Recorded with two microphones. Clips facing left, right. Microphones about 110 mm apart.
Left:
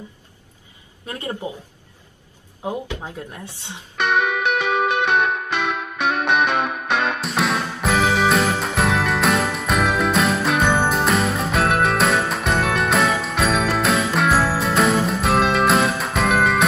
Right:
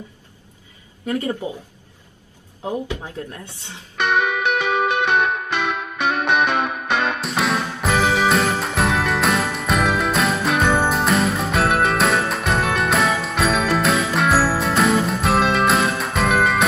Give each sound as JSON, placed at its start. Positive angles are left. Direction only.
{"t": 2.6, "sound": "speech", "side_deg": 15}
{"t": 3.9, "sound": "music", "side_deg": 0}